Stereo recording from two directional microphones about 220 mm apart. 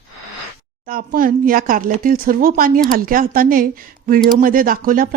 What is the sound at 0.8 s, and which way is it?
A woman's voice, 40° right (ahead or behind).